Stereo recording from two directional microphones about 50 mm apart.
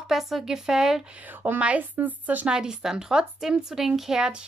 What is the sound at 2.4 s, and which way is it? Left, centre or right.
A woman's voice, centre.